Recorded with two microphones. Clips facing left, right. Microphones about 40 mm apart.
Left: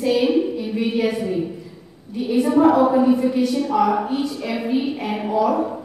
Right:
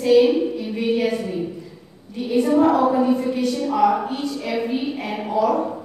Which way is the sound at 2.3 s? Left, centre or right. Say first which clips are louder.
Left 1 dB; centre.